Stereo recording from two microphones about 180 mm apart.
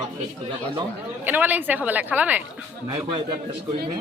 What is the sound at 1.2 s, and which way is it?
Speech, 10° right (ahead or behind).